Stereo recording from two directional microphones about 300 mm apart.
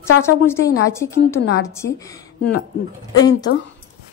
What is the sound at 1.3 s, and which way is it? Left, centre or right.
Speech, left.